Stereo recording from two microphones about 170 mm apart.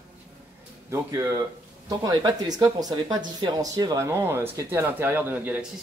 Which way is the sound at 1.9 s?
25° right (ahead or behind).